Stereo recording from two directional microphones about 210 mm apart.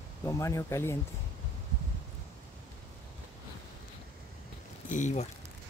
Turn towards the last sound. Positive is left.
turn(degrees=35)  # may be behind; listen again after turning